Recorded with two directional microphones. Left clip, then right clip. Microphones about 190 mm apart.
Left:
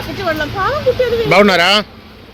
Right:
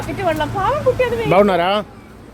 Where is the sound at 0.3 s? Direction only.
30° left (ahead or behind).